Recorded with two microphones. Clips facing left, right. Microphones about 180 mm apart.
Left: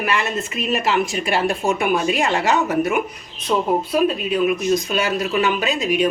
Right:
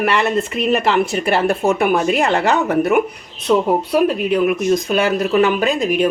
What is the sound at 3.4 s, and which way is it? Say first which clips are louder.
Speech: right 4 dB; 70° right (ahead or behind).